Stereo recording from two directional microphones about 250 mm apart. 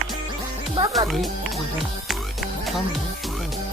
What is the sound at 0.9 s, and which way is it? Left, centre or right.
Music, centre.